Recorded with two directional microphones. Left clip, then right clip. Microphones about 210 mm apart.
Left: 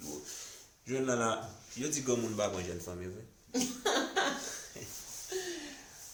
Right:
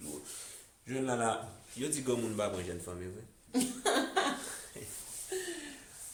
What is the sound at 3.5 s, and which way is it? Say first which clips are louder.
Cough: right 1 dB; 15° right (ahead or behind).